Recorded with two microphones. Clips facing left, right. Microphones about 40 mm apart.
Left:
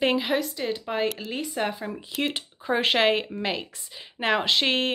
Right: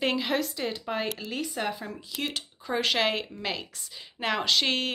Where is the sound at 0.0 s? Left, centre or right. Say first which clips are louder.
Left 4 dB; centre.